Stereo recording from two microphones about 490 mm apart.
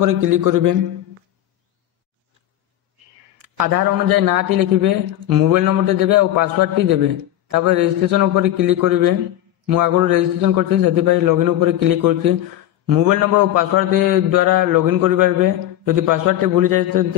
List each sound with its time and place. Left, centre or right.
0.0 s a man's voice: right
3.3 s a man's voice: right